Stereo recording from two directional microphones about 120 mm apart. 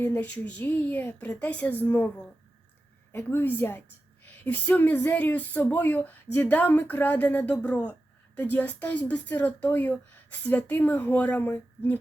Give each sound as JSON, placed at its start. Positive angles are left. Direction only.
{"t": 0.1, "sound": "speech", "side_deg": 10}
{"t": 3.1, "sound": "speech", "side_deg": 15}